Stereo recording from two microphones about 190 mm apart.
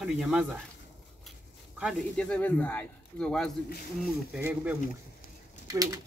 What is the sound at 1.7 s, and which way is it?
Speech, centre (ahead or behind).